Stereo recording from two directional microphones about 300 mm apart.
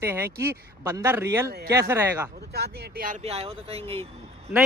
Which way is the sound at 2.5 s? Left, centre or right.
Right.